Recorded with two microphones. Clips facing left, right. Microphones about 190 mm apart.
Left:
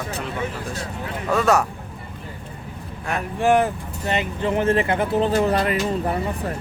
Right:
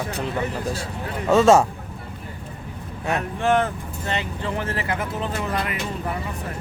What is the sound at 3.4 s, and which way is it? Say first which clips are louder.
Speech: left 4 dB; 15° left (ahead or behind).